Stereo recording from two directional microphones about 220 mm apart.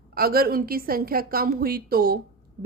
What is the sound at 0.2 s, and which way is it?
Speech, 45° right (ahead or behind).